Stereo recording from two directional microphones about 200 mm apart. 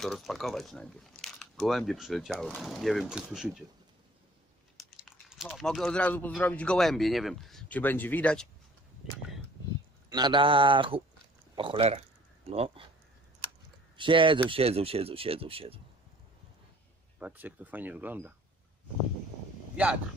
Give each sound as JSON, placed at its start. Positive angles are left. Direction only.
{"t": 0.0, "sound": "speech", "side_deg": 0}
{"t": 4.7, "sound": "a sound", "side_deg": -5}
{"t": 5.3, "sound": "speech", "side_deg": 0}
{"t": 10.0, "sound": "speech", "side_deg": -20}
{"t": 13.9, "sound": "speech", "side_deg": -25}
{"t": 17.2, "sound": "speech", "side_deg": -10}